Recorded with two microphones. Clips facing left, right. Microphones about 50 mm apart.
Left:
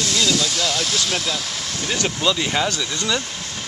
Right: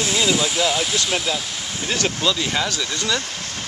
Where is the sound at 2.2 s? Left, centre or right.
Centre.